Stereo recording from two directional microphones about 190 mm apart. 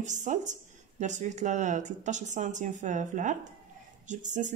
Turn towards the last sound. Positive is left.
turn(degrees=-40)  # may be behind; listen again after turning